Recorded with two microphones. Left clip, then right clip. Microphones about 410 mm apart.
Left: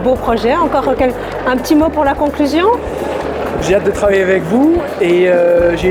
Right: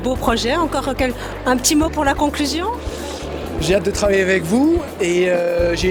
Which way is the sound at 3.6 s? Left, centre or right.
Right.